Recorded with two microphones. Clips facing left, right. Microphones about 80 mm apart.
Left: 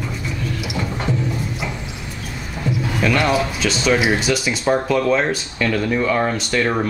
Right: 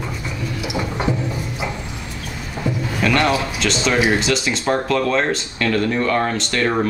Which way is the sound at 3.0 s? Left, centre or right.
Centre.